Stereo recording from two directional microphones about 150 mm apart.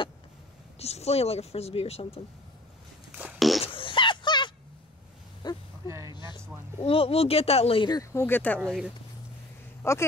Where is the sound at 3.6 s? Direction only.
35° left (ahead or behind).